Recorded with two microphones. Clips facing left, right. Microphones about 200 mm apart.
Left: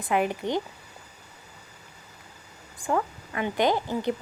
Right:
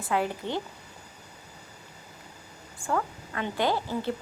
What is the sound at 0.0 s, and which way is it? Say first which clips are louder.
Speech: left 3 dB; 15° left (ahead or behind).